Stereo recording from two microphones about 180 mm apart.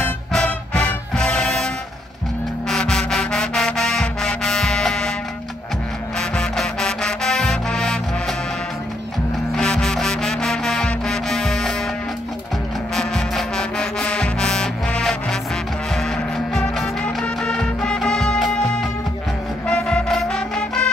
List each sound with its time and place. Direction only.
0.3 s music: 5° left (ahead or behind)
2.7 s music: 5° left (ahead or behind)
6.1 s music: 5° left (ahead or behind)
9.6 s music: 5° left (ahead or behind)
12.9 s music: centre (ahead or behind)
19.7 s music: 5° left (ahead or behind)